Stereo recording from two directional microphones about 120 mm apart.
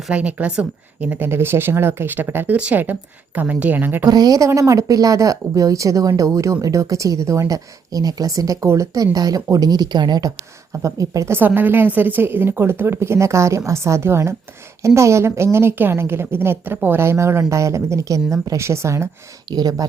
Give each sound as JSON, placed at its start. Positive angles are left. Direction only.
{"t": 0.1, "sound": "speech", "side_deg": -10}
{"t": 4.0, "sound": "speech", "side_deg": -30}
{"t": 19.5, "sound": "speech", "side_deg": -35}